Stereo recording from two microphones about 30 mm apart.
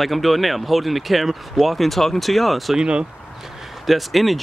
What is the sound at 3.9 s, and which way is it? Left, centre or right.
Speech, centre.